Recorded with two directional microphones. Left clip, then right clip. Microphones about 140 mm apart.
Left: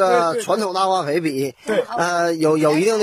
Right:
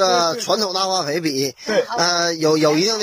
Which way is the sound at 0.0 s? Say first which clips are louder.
Left 1 dB; centre (ahead or behind).